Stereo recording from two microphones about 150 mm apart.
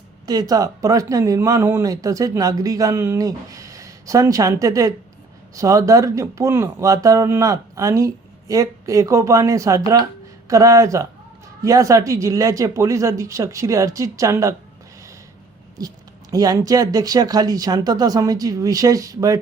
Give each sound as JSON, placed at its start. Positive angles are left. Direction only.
{"t": 0.3, "sound": "speech", "side_deg": -25}
{"t": 15.8, "sound": "speech", "side_deg": -25}